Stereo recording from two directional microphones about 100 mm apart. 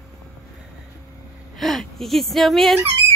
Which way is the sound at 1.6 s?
Centre (ahead or behind).